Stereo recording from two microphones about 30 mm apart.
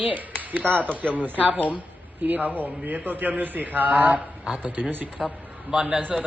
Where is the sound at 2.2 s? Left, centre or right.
Right.